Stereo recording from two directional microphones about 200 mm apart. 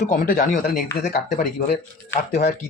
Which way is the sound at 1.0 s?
40° left (ahead or behind).